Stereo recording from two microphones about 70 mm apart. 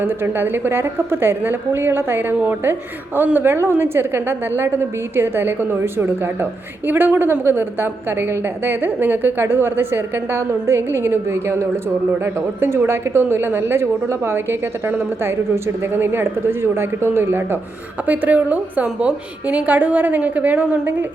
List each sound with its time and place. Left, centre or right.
0.0 s a woman's voice: right
18.0 s a woman's voice: right